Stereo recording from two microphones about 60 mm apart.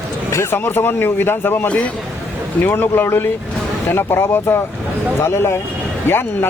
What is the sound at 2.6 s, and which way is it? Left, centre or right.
Speech, left.